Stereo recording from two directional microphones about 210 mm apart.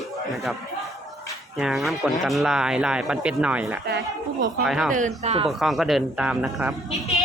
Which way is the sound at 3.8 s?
55° right (ahead or behind).